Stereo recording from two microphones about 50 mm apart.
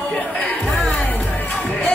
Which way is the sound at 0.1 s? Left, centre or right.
Left.